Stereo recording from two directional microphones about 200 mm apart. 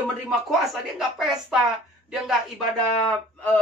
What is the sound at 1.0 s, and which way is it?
Speech, centre (ahead or behind).